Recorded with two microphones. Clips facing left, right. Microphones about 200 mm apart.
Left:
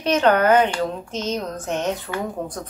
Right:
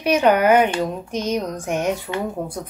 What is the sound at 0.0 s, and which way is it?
A woman's voice, 10° right (ahead or behind).